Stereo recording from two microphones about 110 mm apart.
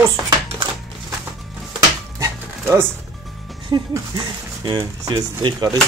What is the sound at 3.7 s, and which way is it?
Speech, 45° right (ahead or behind).